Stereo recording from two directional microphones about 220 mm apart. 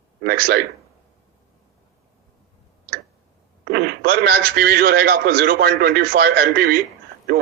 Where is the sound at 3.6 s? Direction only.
45° right (ahead or behind).